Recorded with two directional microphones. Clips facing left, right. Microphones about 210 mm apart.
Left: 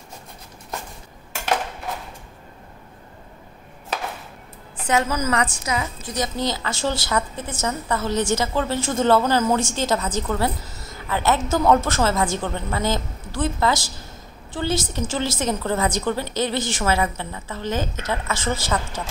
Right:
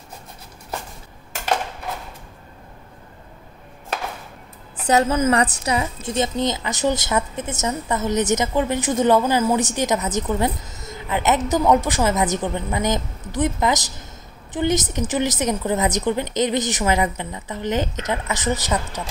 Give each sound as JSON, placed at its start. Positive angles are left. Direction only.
{"t": 4.8, "sound": "a woman's voice", "side_deg": -30}